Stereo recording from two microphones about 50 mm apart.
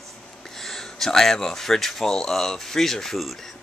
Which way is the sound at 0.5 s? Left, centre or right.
Centre.